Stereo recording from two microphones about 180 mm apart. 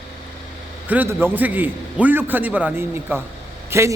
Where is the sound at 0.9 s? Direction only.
10° right (ahead or behind).